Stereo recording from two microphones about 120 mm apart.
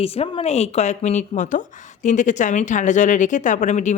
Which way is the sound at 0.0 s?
55° left (ahead or behind).